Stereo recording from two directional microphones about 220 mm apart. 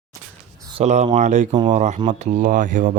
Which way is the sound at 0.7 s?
30° right (ahead or behind).